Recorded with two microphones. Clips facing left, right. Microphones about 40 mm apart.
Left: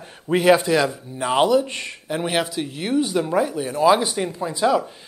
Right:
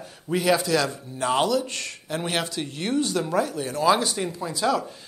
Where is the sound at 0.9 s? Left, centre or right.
Centre.